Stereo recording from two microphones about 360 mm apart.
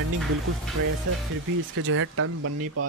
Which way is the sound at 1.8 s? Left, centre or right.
Right.